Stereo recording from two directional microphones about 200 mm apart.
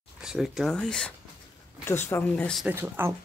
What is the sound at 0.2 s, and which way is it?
Speech, centre (ahead or behind).